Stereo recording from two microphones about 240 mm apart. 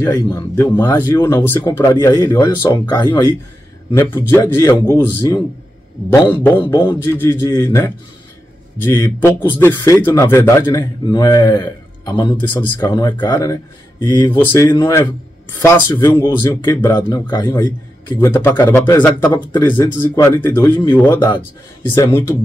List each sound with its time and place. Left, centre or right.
0.0 s speech: centre